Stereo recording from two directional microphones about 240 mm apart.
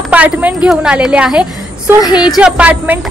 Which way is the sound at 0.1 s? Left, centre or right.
Centre.